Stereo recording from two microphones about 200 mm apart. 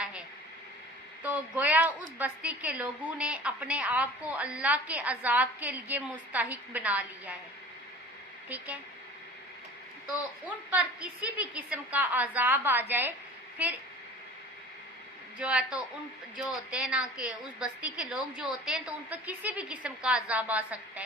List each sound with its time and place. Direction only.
0.0 s a sound: 5° right (ahead or behind)
1.2 s a woman's voice: 10° right (ahead or behind)
8.4 s a woman's voice: 10° right (ahead or behind)
10.4 s a woman's voice: 5° right (ahead or behind)
15.4 s a woman's voice: 5° right (ahead or behind)